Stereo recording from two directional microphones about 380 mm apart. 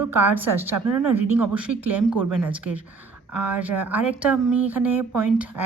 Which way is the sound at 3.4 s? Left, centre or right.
Centre.